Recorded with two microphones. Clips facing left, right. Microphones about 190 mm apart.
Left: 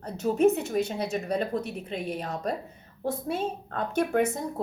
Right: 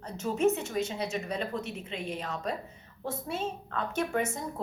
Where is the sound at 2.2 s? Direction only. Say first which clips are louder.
Left 3 dB; 40° left (ahead or behind).